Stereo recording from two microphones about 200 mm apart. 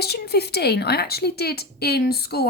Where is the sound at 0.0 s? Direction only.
55° left (ahead or behind).